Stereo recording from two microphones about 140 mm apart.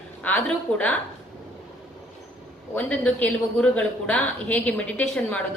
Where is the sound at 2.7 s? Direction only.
10° left (ahead or behind).